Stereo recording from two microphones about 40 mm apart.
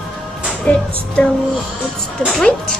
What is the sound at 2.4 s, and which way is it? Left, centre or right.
Speech, centre.